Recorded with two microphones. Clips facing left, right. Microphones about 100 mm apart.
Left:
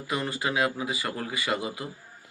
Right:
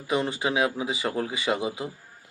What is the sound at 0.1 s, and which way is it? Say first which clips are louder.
Speech: right 4 dB; 20° right (ahead or behind).